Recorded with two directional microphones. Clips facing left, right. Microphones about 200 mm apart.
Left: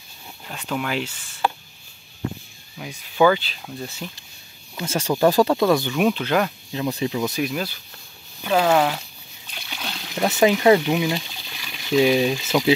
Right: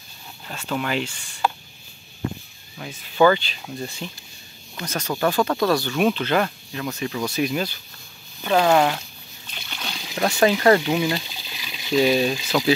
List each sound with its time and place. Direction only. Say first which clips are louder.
0.7 s speech: right 1 dB; 5° left (ahead or behind)
2.8 s speech: even; 5° left (ahead or behind)
4.7 s speech: left 4 dB; 30° left (ahead or behind)
5.5 s speech: left 2 dB; 20° left (ahead or behind)
5.9 s speech: even; 5° left (ahead or behind)
6.7 s speech: left 4 dB; 20° left (ahead or behind)
7.3 s speech: right 2 dB; centre (ahead or behind)
9.5 s a sound: left 1 dB; 5° left (ahead or behind)
10.3 s speech: left 1 dB; 15° left (ahead or behind)
11.5 s water: even; 10° right (ahead or behind)
11.9 s speech: left 1 dB; 15° left (ahead or behind)